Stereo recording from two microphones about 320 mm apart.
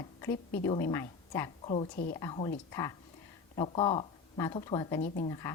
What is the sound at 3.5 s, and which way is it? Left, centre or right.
Speech, centre.